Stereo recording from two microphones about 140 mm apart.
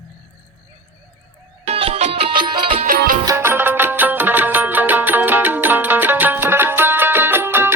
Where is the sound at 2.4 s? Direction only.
35° right (ahead or behind).